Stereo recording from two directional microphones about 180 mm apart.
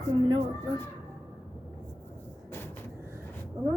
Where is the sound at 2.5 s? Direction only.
10° left (ahead or behind).